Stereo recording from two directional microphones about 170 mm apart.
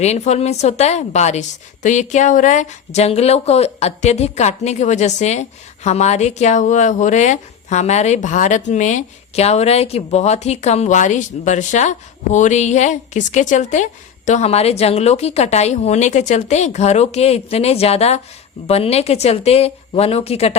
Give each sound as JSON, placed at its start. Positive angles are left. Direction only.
{"t": 0.0, "sound": "a woman's voice", "side_deg": 40}